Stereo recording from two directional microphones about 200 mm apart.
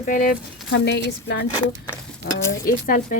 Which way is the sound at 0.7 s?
60° left (ahead or behind).